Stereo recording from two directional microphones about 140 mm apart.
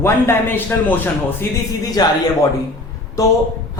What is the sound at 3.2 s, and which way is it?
Speech, 25° left (ahead or behind).